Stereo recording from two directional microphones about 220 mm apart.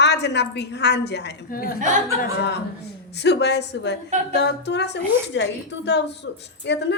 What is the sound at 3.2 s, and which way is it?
A woman's voice, 50° left (ahead or behind).